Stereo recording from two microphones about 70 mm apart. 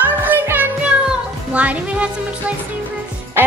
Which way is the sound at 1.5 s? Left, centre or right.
Right.